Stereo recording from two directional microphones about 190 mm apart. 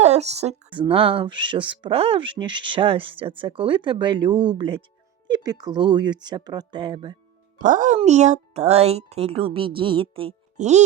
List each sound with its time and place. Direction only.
0.0 s speech: 35° right (ahead or behind)
7.6 s a child's voice: 45° right (ahead or behind)